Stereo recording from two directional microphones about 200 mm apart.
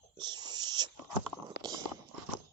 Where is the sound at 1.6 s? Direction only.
20° right (ahead or behind).